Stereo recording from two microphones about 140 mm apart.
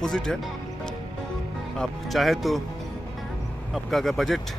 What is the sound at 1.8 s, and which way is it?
Speech, centre (ahead or behind).